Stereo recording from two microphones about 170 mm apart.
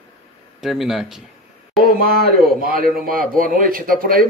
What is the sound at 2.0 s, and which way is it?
A man's voice, 60° right (ahead or behind).